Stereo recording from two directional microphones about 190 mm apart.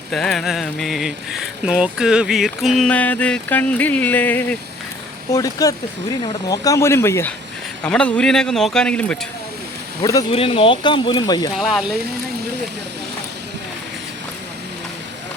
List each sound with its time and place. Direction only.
0.1 s speech: centre (ahead or behind)
10.0 s speech: 20° left (ahead or behind)
10.3 s speech: 30° left (ahead or behind)
11.5 s speech: centre (ahead or behind)